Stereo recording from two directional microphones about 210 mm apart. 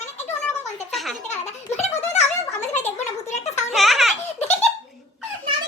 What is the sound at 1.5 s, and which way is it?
Giggle, 30° left (ahead or behind).